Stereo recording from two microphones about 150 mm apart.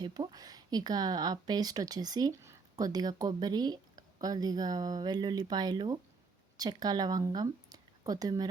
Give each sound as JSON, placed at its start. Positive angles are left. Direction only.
{"t": 0.0, "sound": "speech", "side_deg": -30}